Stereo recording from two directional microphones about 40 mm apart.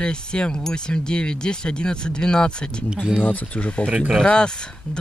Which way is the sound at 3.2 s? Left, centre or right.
Left.